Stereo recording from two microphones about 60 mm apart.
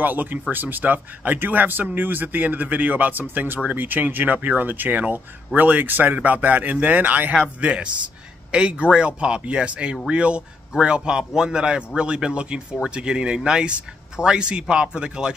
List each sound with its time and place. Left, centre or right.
0.0 s speech: right; by 15.3 s centre